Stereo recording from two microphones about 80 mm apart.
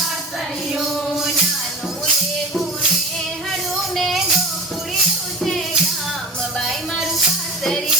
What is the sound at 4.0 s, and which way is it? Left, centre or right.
Music, centre.